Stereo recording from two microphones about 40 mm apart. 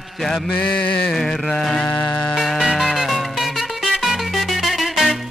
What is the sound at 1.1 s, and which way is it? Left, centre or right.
Carnatic music, centre.